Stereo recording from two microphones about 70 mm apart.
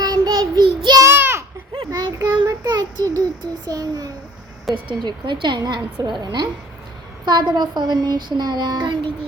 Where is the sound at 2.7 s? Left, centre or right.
Right.